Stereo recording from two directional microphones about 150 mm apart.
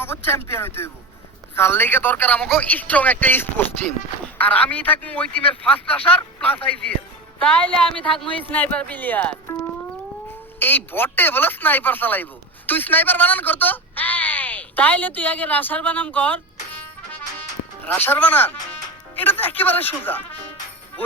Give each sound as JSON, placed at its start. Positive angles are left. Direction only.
{"t": 0.6, "sound": "speech", "side_deg": 15}
{"t": 10.6, "sound": "speech", "side_deg": 15}
{"t": 17.8, "sound": "speech", "side_deg": 10}